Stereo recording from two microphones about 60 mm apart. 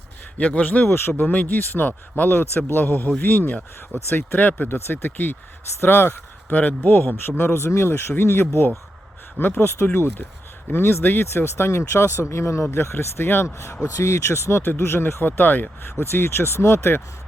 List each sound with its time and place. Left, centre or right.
0.3 s speech: left
0.9 s speech: left
1.3 s speech: left
6.5 s speech: left
13.8 s speech: left
16.0 s speech: left